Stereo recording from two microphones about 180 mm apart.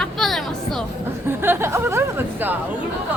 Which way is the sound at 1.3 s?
15° right (ahead or behind).